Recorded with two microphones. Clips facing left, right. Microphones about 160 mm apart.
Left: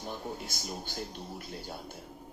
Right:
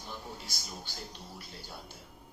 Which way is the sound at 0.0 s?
50° left (ahead or behind).